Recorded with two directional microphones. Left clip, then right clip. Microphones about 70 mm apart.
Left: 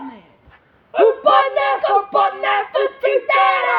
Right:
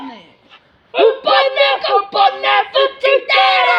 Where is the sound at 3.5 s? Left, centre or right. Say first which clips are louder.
Right 5 dB; left.